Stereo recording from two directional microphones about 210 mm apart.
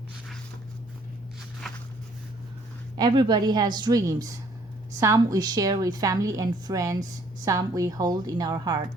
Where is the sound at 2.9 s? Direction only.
20° right (ahead or behind).